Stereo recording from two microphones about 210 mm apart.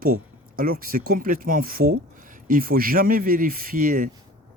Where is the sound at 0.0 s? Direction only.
45° right (ahead or behind).